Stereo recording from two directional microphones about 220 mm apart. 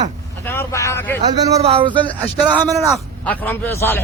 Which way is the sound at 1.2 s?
20° right (ahead or behind).